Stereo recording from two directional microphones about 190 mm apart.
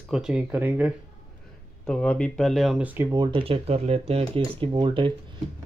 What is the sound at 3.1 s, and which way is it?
Speech, 25° right (ahead or behind).